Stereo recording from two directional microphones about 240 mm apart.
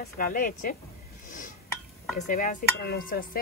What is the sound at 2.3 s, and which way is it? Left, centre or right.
A woman's voice, left.